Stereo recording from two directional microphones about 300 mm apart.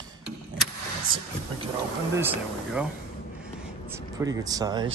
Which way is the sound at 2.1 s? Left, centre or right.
Centre.